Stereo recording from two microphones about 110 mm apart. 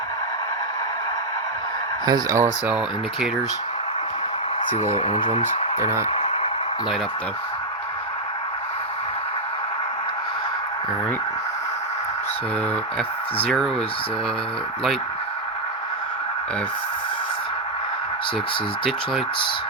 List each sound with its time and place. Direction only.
2.0 s speech: 30° right (ahead or behind)
2.6 s speech: 10° right (ahead or behind)
5.8 s speech: 25° right (ahead or behind)
6.1 s a sound: 50° left (ahead or behind)
13.0 s speech: 5° left (ahead or behind)